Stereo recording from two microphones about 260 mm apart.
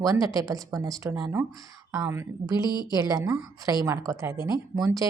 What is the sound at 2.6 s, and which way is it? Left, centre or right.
Speech, centre.